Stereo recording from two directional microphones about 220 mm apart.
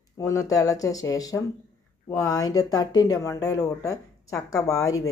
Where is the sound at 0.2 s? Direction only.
15° left (ahead or behind).